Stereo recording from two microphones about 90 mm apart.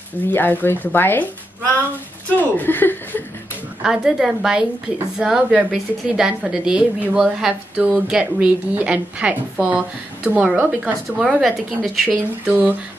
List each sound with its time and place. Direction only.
0.3 s speech: 20° left (ahead or behind)
3.8 s a woman's voice: 5° right (ahead or behind)
10.8 s speech: 5° right (ahead or behind)
12.1 s a woman's voice: 15° right (ahead or behind)